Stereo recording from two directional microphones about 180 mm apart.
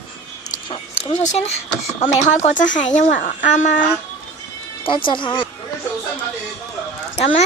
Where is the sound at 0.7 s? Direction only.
35° left (ahead or behind).